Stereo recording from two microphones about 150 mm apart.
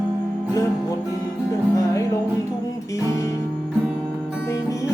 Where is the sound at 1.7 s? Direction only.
20° left (ahead or behind).